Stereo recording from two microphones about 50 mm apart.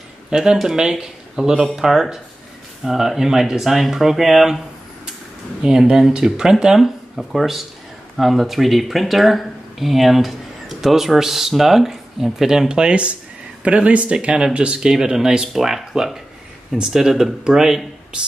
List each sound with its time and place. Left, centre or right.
0.3 s speech: centre
5.6 s speech: centre